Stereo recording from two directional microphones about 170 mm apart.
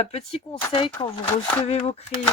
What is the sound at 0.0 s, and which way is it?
Speech, 40° left (ahead or behind).